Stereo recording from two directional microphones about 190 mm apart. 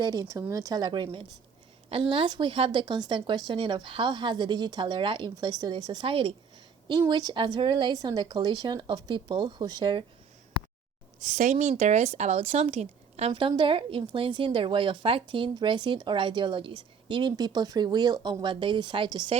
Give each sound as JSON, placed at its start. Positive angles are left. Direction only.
{"t": 0.0, "sound": "a woman's voice", "side_deg": -20}
{"t": 11.2, "sound": "a woman's voice", "side_deg": -40}